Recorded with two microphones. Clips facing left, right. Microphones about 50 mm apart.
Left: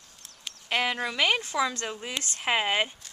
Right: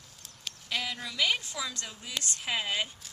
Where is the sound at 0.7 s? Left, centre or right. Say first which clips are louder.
Left 8 dB; left.